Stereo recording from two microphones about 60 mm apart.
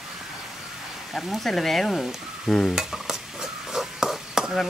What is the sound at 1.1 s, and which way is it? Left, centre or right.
Speech, centre.